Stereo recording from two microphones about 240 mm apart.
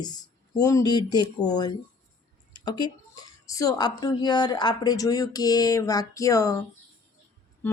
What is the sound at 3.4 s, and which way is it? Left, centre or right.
Speech, centre.